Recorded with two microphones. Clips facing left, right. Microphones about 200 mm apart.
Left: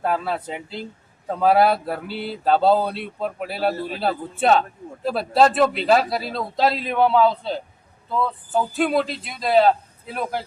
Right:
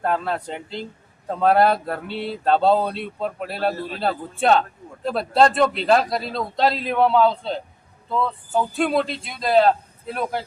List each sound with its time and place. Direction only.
0.0 s speech: 5° left (ahead or behind)